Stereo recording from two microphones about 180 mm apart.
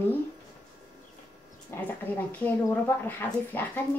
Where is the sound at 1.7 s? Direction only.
15° left (ahead or behind).